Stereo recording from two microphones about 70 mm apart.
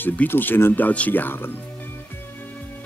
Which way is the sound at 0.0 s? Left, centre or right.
Left.